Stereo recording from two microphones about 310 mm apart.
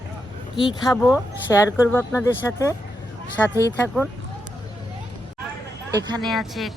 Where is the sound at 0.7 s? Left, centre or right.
Centre.